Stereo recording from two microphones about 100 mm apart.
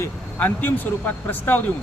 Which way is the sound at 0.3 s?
20° left (ahead or behind).